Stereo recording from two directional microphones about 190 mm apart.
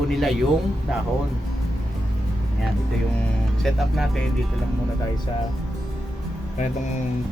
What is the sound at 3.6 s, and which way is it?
Speech, centre (ahead or behind).